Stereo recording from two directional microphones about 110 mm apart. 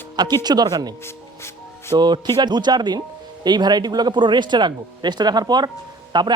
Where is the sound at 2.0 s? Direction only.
40° right (ahead or behind).